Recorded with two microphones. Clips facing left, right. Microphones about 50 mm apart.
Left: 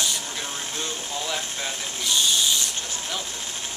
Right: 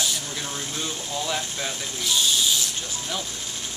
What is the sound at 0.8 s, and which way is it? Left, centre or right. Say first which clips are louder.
Speech: right 2 dB; centre.